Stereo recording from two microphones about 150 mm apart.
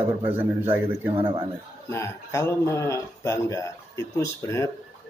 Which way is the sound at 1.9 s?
20° left (ahead or behind).